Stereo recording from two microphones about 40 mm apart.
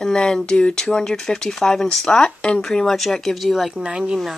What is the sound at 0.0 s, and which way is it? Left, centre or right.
Speech, centre.